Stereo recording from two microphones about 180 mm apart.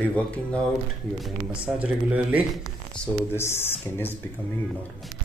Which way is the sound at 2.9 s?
15° left (ahead or behind).